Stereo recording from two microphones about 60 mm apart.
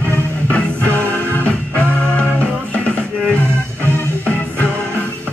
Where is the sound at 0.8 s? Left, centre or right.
Left.